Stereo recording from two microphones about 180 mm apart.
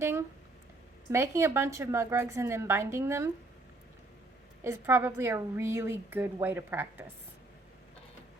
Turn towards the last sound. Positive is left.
turn(degrees=-10)  # may be behind; listen again after turning